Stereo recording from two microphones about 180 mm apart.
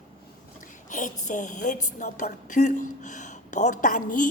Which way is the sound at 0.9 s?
45° left (ahead or behind).